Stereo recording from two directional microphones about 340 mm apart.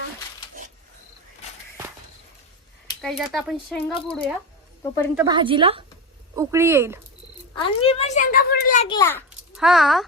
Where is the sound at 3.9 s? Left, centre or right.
Centre.